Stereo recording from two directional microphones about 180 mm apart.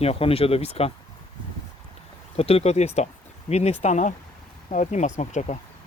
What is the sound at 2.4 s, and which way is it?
Speech, 35° left (ahead or behind).